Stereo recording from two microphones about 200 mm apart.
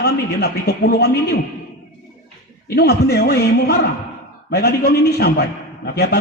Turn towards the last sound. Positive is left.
turn(degrees=55)  # may be behind; listen again after turning